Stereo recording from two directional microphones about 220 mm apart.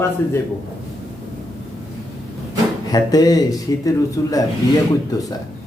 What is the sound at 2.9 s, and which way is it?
A man's voice, 15° left (ahead or behind).